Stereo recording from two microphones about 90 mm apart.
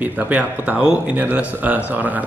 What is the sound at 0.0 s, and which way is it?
Speech, 20° right (ahead or behind).